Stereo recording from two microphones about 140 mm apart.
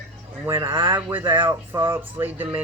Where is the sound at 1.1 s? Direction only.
15° right (ahead or behind).